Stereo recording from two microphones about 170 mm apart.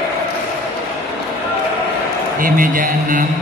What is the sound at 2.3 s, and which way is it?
Speech, 55° right (ahead or behind).